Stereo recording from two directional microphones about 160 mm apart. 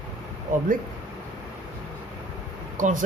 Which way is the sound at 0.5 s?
50° right (ahead or behind).